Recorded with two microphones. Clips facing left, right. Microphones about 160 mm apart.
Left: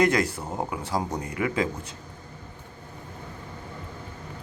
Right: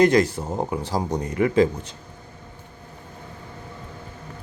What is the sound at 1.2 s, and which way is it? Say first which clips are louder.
Speech: right 6 dB; 35° right (ahead or behind).